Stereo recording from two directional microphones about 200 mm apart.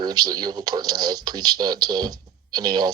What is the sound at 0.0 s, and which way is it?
Speech, 20° right (ahead or behind).